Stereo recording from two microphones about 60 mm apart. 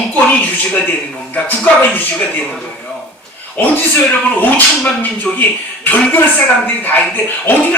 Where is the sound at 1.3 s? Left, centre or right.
Left.